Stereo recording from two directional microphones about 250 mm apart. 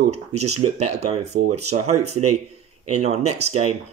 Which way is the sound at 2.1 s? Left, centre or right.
Right.